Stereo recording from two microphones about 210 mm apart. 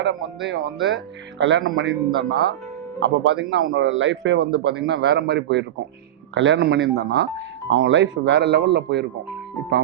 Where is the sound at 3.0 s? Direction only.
60° right (ahead or behind).